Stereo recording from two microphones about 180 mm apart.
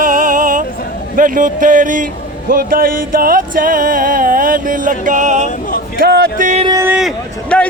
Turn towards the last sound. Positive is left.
turn(degrees=5)  # may be behind; listen again after turning